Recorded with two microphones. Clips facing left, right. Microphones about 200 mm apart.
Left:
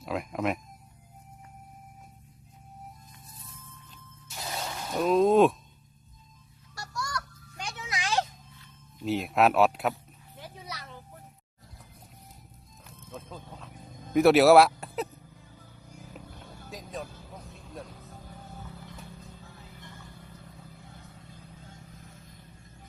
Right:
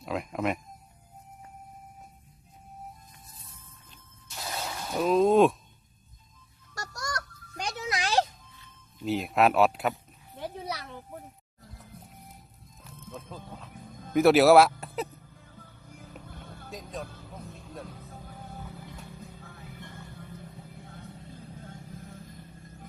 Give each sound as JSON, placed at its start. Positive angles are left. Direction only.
{"t": 0.0, "sound": "speech", "side_deg": 0}
{"t": 4.5, "sound": "a sound", "side_deg": 0}
{"t": 6.7, "sound": "music", "side_deg": -45}
{"t": 9.0, "sound": "speech", "side_deg": 0}
{"t": 10.3, "sound": "children playing", "side_deg": -60}
{"t": 12.8, "sound": "a sound", "side_deg": 0}
{"t": 16.6, "sound": "music", "side_deg": 0}